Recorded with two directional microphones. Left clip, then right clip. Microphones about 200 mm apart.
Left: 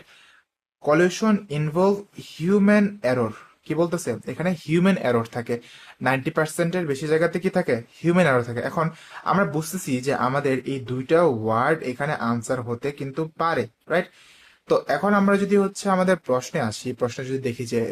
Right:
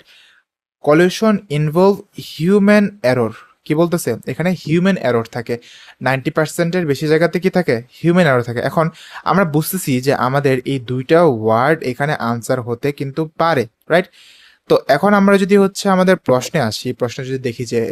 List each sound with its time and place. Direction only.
0.8 s speech: 40° right (ahead or behind)